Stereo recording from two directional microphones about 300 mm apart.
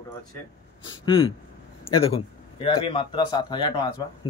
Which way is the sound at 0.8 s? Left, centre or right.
Centre.